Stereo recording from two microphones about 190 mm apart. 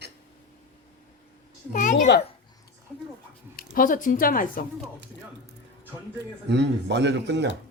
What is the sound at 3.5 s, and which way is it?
Speech, 45° left (ahead or behind).